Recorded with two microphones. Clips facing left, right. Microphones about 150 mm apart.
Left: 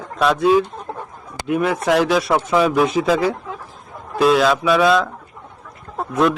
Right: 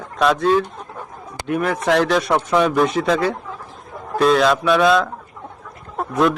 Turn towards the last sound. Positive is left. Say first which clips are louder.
# even
turn(degrees=0)  # may be behind; listen again after turning